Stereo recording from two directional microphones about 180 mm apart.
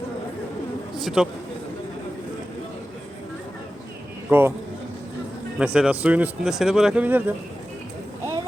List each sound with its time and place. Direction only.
0.9 s a man's voice: centre (ahead or behind)
4.3 s speech: 10° right (ahead or behind)
5.5 s speech: 5° right (ahead or behind)